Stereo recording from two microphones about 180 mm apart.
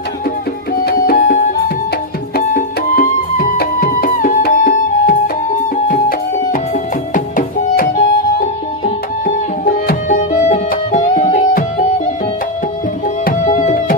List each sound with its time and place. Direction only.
0.8 s music: 55° left (ahead or behind)
7.2 s music: 45° left (ahead or behind)
9.8 s music: 45° left (ahead or behind)
13.2 s music: 45° left (ahead or behind)